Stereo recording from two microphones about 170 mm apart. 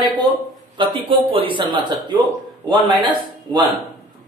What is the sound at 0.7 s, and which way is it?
A man's voice, 30° right (ahead or behind).